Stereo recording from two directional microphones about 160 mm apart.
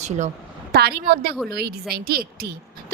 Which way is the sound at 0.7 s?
80° right.